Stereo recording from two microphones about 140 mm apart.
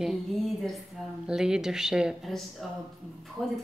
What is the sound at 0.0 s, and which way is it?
A woman's voice, centre (ahead or behind).